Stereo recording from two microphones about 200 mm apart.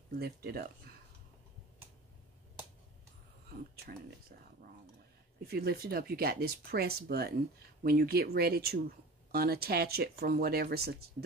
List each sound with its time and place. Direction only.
0.2 s speech: 50° right (ahead or behind)
3.7 s speech: 50° right (ahead or behind)
5.4 s speech: 50° right (ahead or behind)